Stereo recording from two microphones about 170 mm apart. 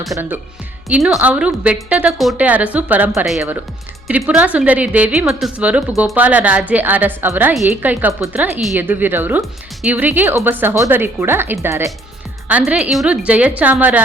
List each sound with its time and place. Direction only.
0.9 s a woman's voice: 5° right (ahead or behind)